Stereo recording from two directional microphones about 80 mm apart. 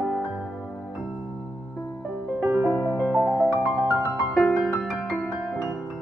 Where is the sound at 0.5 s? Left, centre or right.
Centre.